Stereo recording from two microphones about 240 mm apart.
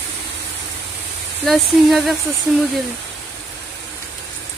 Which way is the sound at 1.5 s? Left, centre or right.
Centre.